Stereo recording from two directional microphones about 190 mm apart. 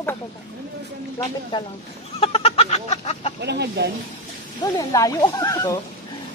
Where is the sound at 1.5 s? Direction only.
25° left (ahead or behind).